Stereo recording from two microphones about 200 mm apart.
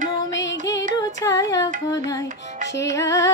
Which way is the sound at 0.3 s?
65° left (ahead or behind).